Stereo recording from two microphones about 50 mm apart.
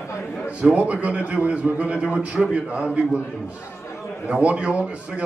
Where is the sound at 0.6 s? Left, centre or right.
Right.